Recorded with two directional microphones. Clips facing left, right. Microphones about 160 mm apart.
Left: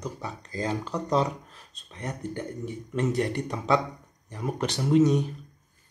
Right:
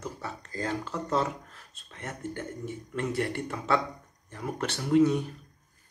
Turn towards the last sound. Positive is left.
turn(degrees=20)  # may be behind; listen again after turning